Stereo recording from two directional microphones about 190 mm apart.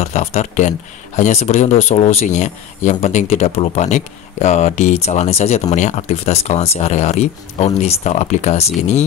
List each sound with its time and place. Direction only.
0.0 s speech: 35° left (ahead or behind)